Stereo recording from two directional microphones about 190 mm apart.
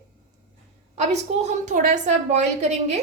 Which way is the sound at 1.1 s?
40° right (ahead or behind).